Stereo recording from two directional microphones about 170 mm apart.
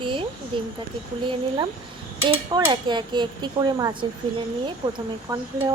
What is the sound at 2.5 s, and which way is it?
Speech, 25° right (ahead or behind).